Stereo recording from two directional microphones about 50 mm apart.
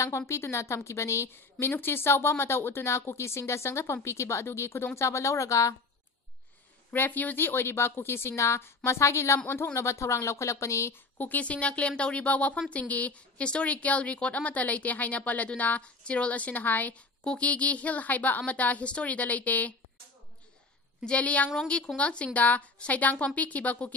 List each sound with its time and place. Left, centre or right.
0.3 s a woman's voice: left
1.7 s a woman's voice: left
4.9 s speech: left
6.9 s a woman's voice: left
11.1 s a woman's voice: left
11.4 s a woman's voice: left
17.2 s a woman's voice: left
21.0 s a woman's voice: left